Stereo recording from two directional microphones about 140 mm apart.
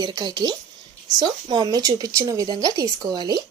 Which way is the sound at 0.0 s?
30° right (ahead or behind).